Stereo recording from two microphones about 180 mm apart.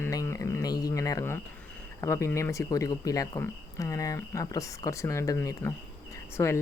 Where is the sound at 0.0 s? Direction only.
15° left (ahead or behind).